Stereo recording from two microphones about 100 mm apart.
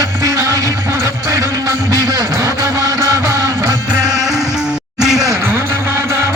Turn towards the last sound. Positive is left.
turn(degrees=-25)  # may be behind; listen again after turning